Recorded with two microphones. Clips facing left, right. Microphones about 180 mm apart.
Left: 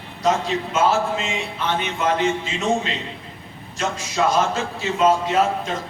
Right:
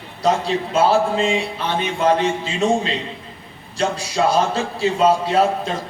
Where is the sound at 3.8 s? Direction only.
35° right (ahead or behind).